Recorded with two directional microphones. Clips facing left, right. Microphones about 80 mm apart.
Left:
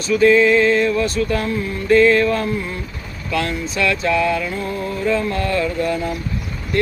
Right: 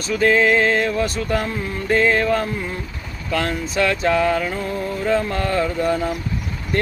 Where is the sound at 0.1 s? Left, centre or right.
Right.